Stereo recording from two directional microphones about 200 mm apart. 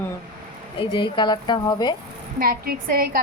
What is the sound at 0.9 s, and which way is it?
Speech, 25° left (ahead or behind).